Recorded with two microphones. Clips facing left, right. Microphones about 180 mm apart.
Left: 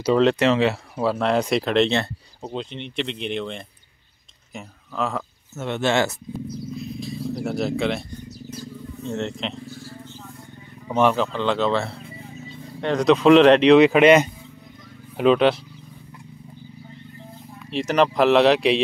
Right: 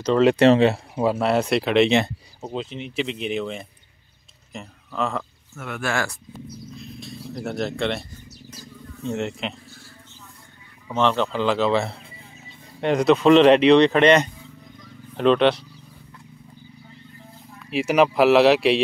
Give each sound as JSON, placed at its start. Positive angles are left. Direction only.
{"t": 0.4, "sound": "speech", "side_deg": -35}
{"t": 1.0, "sound": "speech", "side_deg": -5}
{"t": 5.6, "sound": "speech", "side_deg": 25}
{"t": 6.7, "sound": "wild animals", "side_deg": 0}
{"t": 9.1, "sound": "speech", "side_deg": -10}
{"t": 11.0, "sound": "speech", "side_deg": 10}
{"t": 11.3, "sound": "speech", "side_deg": -5}
{"t": 12.8, "sound": "speech", "side_deg": -5}
{"t": 17.6, "sound": "speech", "side_deg": -5}